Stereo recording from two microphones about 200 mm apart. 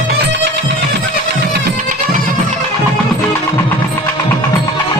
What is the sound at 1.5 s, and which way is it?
Music, 40° right (ahead or behind).